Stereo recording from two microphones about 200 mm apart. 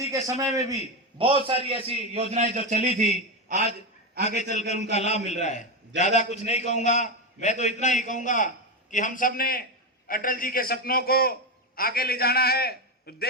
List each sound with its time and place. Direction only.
0.0 s a man's voice: 15° right (ahead or behind); by 2.8 s 35° right (ahead or behind)
4.2 s a man's voice: 35° left (ahead or behind); by 13.2 s 50° left (ahead or behind)